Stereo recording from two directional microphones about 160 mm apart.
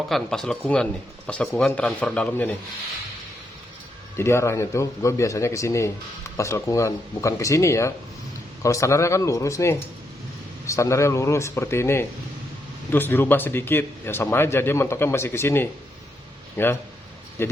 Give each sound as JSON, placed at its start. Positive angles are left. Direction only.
{"t": 0.1, "sound": "speech", "side_deg": 5}
{"t": 4.2, "sound": "speech", "side_deg": 15}